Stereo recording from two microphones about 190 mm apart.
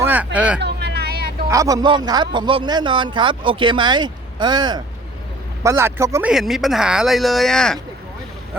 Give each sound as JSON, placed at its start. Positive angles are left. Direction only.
{"t": 0.0, "sound": "a sound", "side_deg": -10}
{"t": 0.3, "sound": "speech", "side_deg": -5}
{"t": 0.6, "sound": "vehicle", "side_deg": -60}
{"t": 1.5, "sound": "a man's voice", "side_deg": -15}
{"t": 6.3, "sound": "speech", "side_deg": 0}